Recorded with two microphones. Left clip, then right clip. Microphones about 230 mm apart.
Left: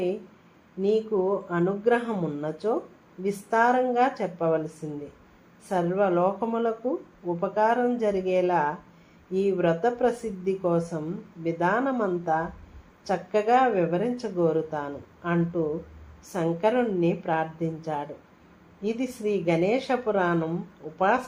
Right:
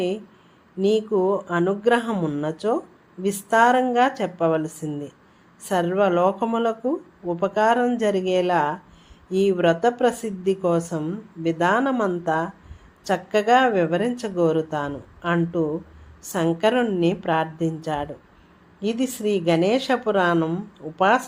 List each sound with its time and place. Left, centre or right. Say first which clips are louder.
0.8 s speech: right 4 dB; right